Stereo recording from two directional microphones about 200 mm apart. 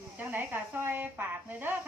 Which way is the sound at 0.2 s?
10° right (ahead or behind).